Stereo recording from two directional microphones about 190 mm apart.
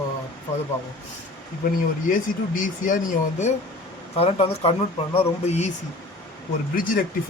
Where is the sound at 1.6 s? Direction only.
50° left (ahead or behind).